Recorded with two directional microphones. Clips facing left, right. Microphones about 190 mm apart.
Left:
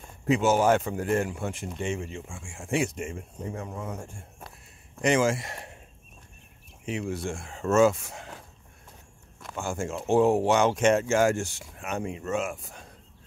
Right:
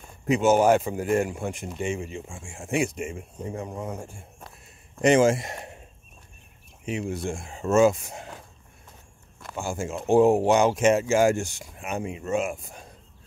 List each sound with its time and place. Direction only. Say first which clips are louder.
0.3 s speech: right 3 dB; 20° right (ahead or behind)
2.9 s speech: right 2 dB; 10° right (ahead or behind)
5.0 s speech: right 5 dB; 25° right (ahead or behind)
6.9 s speech: right 2 dB; 20° right (ahead or behind)
9.4 s speech: right 1 dB; 5° right (ahead or behind)